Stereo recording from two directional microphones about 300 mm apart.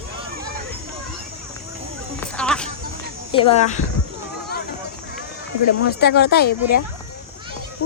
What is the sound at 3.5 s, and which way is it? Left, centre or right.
Speech, left.